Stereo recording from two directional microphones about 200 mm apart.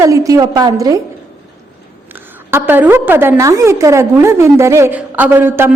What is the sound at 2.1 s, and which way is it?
A woman's voice, 10° right (ahead or behind).